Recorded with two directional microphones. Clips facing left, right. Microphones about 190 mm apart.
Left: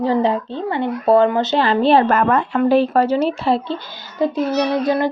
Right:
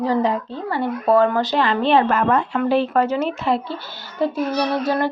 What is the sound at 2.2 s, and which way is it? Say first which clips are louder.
Speech: left 2 dB; 55° left (ahead or behind).